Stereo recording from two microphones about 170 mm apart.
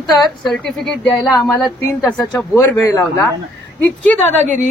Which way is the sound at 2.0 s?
5° left (ahead or behind).